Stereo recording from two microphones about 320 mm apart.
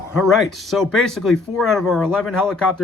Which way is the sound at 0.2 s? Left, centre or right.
Centre.